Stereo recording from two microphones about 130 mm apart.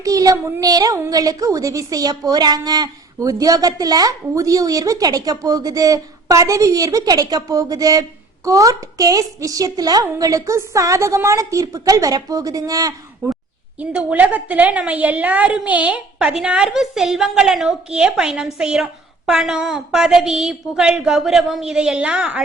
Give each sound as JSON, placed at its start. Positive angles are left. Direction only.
{"t": 0.0, "sound": "a woman's voice", "side_deg": -25}
{"t": 13.7, "sound": "a woman's voice", "side_deg": -10}